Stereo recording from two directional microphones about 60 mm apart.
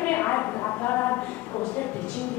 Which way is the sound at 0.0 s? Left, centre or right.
Left.